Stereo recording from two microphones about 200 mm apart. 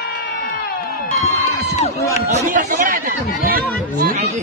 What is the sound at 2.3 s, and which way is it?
Speech, 35° right (ahead or behind).